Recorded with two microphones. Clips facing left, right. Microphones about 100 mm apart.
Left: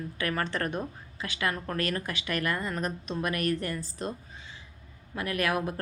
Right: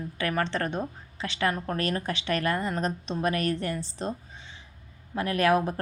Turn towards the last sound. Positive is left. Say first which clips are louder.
# right 5 dB
turn(degrees=-30)  # may be behind; listen again after turning